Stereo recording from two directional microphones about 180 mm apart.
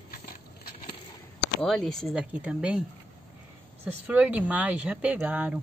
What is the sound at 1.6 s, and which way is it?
Speech, centre (ahead or behind).